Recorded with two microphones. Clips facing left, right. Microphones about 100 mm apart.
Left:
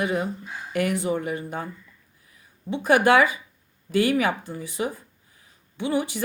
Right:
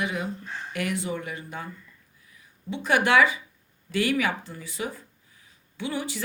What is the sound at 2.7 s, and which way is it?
Speech, 35° left (ahead or behind).